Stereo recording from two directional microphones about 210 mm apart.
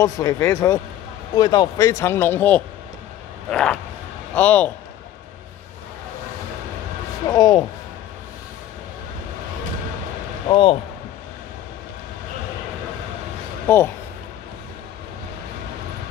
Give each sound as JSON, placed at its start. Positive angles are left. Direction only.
{"t": 0.0, "sound": "speech", "side_deg": 15}
{"t": 7.2, "sound": "speech", "side_deg": 15}
{"t": 10.5, "sound": "speech", "side_deg": 25}
{"t": 13.7, "sound": "speech", "side_deg": 10}